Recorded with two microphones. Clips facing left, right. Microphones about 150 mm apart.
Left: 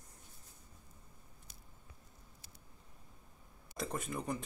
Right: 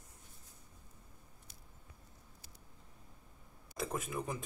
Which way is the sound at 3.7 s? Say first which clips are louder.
Right 1 dB; centre (ahead or behind).